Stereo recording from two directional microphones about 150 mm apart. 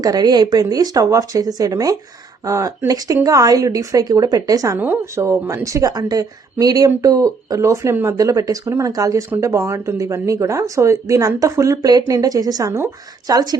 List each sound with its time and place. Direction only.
0.0 s speech: 25° right (ahead or behind)